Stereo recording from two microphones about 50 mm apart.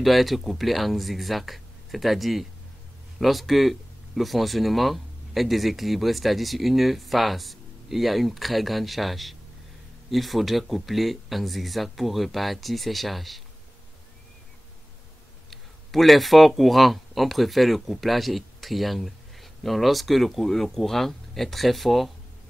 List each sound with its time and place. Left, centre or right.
0.0 s speech: centre
15.5 s speech: centre